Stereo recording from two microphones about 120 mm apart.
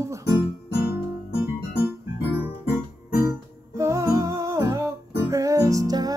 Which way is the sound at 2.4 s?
15° right (ahead or behind).